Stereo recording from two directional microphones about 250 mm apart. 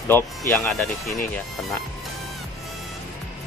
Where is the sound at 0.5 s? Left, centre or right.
Centre.